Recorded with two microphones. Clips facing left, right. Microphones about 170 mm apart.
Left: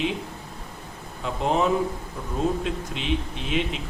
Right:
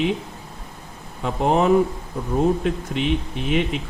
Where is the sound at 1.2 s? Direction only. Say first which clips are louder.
Right 4 dB; 55° right (ahead or behind).